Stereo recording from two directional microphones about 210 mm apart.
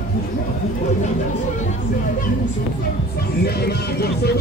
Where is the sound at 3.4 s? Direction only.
50° left (ahead or behind).